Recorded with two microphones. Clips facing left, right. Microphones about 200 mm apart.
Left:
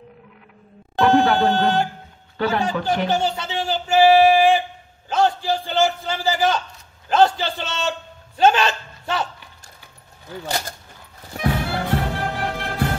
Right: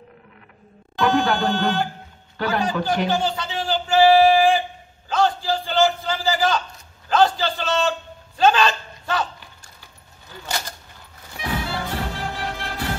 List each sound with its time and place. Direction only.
0.9 s music: 25° left (ahead or behind)
2.3 s a man's voice: 25° left (ahead or behind)
5.1 s a sound: 25° left (ahead or behind)
11.3 s music: 55° left (ahead or behind)